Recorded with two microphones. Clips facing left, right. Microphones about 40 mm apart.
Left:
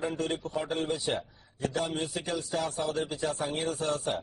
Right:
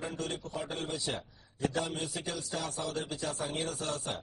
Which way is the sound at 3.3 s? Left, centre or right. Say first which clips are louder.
Left 4 dB; left.